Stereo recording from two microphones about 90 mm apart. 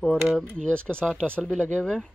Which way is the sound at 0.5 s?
10° left (ahead or behind).